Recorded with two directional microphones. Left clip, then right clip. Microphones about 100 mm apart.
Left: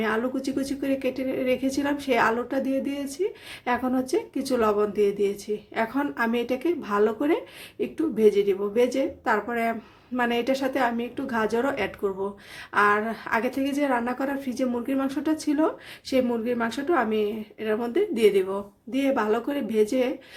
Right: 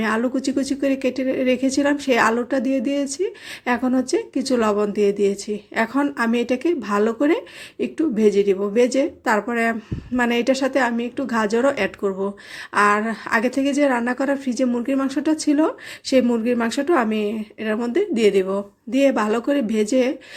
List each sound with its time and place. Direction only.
0.0 s speech: 35° right (ahead or behind)